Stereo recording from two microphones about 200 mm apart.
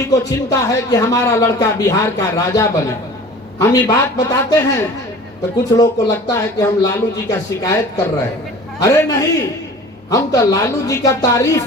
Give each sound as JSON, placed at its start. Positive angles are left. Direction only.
{"t": 0.1, "sound": "speech", "side_deg": 15}